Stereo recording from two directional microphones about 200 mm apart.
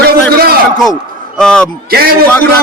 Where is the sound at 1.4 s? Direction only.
5° left (ahead or behind).